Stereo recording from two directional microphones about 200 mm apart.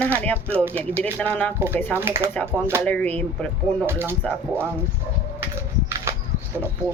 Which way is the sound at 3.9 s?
10° right (ahead or behind).